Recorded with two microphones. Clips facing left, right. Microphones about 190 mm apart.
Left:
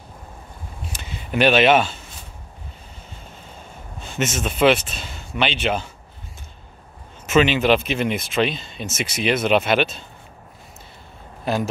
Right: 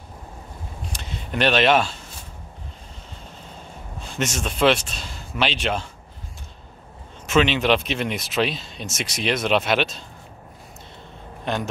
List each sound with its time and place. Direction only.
0.9 s a sound: 5° left (ahead or behind)
4.0 s speech: centre (ahead or behind)
7.2 s speech: 5° left (ahead or behind)
11.4 s speech: 5° left (ahead or behind)